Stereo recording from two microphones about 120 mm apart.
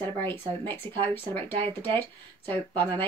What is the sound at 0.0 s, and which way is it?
Speech, 20° left (ahead or behind).